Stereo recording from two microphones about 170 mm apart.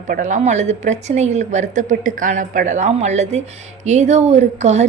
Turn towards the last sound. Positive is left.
turn(degrees=-40)  # may be behind; listen again after turning